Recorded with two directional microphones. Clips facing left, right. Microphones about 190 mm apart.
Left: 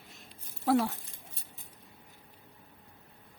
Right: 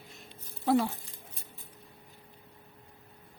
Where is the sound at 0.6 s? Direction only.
Centre (ahead or behind).